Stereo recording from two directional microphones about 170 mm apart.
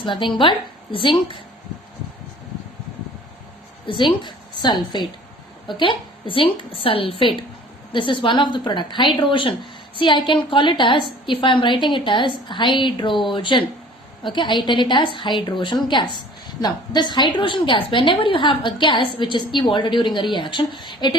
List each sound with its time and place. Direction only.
0.0 s a woman's voice: 30° left (ahead or behind)
3.8 s a woman's voice: 30° left (ahead or behind)